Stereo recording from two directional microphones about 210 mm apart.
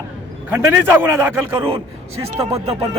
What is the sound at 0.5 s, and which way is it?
Speech, 10° right (ahead or behind).